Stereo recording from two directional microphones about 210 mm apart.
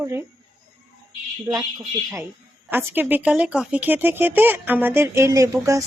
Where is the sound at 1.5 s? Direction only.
20° right (ahead or behind).